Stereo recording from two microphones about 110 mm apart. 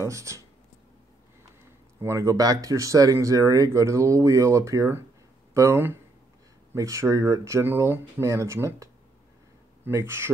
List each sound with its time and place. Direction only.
0.1 s speech: 30° right (ahead or behind)
2.0 s speech: 30° right (ahead or behind)
9.8 s speech: 25° right (ahead or behind)